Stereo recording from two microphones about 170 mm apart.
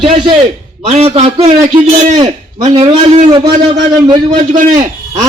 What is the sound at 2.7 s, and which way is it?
Speech, 35° right (ahead or behind).